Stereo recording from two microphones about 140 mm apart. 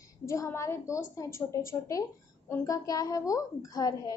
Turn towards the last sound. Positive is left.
turn(degrees=25)  # may be behind; listen again after turning